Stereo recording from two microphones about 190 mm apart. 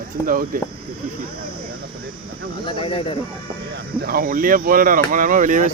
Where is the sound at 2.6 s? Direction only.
25° left (ahead or behind).